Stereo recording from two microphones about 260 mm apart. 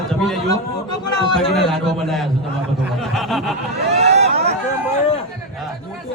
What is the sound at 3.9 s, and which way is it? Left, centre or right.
Vehicle, right.